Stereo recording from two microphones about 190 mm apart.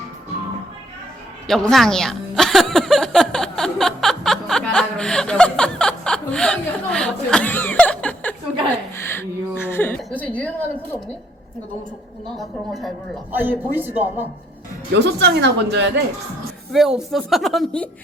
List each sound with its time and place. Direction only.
1.5 s music: centre (ahead or behind)
9.0 s a sound: 10° left (ahead or behind)
10.0 s a woman's voice: 10° left (ahead or behind)
12.4 s speech: centre (ahead or behind)
13.3 s a man's voice: 10° right (ahead or behind)
14.9 s speech: 65° right (ahead or behind)
16.7 s speech: centre (ahead or behind)